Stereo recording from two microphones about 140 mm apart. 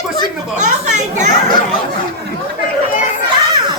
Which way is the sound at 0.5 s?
60° right (ahead or behind).